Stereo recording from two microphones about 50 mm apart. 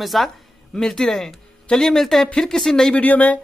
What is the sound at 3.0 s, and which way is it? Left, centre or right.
Speech, left.